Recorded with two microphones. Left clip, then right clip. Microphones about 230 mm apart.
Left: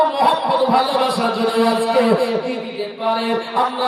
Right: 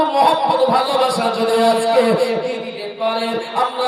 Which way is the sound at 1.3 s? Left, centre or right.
Right.